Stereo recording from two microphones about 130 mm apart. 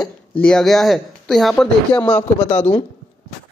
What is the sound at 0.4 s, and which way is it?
Speech, 5° left (ahead or behind).